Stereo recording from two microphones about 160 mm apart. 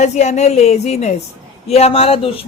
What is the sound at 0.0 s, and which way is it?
A woman's voice, 45° left (ahead or behind).